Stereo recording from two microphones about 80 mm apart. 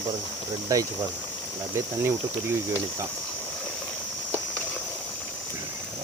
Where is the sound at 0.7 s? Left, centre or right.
Right.